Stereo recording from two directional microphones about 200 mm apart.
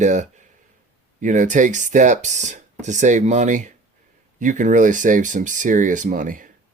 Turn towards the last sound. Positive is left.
turn(degrees=-40)  # may be behind; listen again after turning